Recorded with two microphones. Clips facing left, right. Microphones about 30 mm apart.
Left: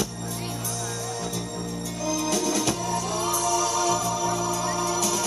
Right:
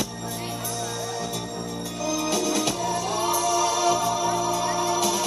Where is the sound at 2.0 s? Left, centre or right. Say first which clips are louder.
Right 1 dB; centre.